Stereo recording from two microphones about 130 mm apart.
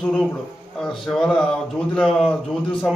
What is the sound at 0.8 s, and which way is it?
A man's voice, 5° left (ahead or behind).